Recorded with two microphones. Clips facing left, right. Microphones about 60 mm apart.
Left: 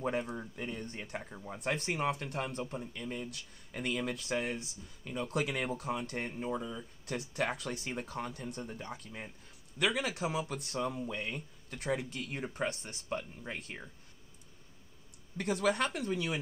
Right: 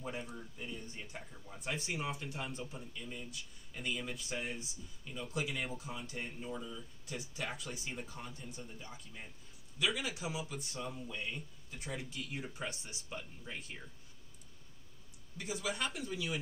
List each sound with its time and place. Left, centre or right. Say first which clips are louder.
0.0 s speech: left 8 dB; left
1.3 s speech: left 6 dB; left
6.3 s speech: left 6 dB; left
15.3 s speech: left 8 dB; left